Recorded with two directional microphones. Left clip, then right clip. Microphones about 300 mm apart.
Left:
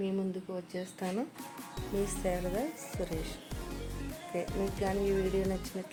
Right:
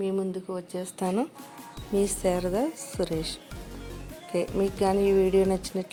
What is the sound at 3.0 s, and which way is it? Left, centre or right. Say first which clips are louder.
Speech: right 9 dB; right.